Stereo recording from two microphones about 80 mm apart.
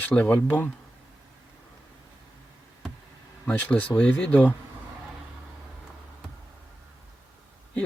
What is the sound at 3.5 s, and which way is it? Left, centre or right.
Speech, centre.